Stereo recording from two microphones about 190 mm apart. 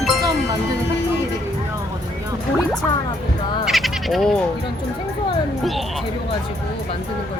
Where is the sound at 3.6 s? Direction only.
Centre (ahead or behind).